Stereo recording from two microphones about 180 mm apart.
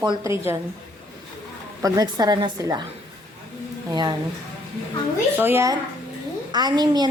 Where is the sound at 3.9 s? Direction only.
25° right (ahead or behind).